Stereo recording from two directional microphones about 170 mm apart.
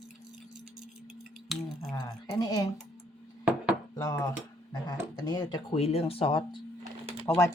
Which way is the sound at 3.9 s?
20° left (ahead or behind).